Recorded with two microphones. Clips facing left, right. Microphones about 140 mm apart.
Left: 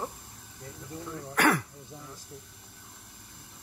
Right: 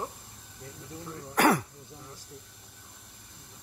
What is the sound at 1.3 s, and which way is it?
Speech, 35° right (ahead or behind).